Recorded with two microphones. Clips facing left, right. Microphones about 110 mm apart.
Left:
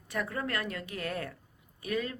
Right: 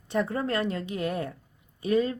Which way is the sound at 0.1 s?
25° right (ahead or behind).